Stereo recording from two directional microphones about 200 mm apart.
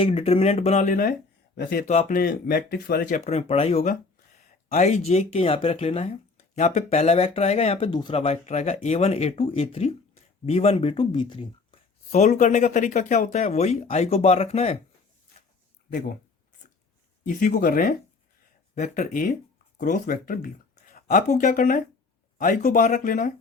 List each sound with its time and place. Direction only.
0.0 s speech: 30° left (ahead or behind); by 3.2 s 50° left (ahead or behind)
3.2 s speech: 30° left (ahead or behind)
15.9 s speech: 45° left (ahead or behind)
17.2 s speech: 40° left (ahead or behind)